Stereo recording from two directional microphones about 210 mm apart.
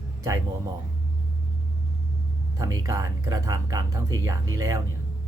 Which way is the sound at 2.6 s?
15° right (ahead or behind).